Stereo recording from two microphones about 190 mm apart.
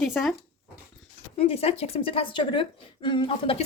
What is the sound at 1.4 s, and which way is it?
Speech, 30° left (ahead or behind).